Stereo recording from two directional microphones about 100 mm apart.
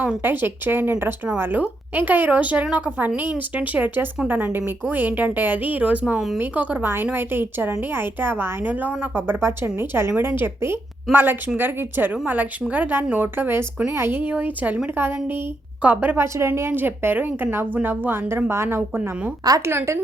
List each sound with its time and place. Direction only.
0.0 s a woman's voice: 15° right (ahead or behind)